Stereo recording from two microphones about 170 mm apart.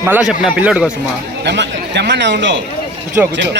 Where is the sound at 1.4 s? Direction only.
90° right.